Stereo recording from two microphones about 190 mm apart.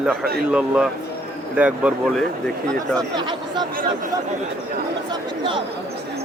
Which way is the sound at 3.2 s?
25° right (ahead or behind).